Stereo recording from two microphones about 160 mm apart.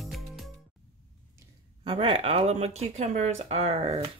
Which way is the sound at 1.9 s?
35° right (ahead or behind).